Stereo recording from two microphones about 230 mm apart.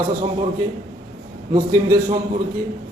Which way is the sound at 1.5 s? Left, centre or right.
Centre.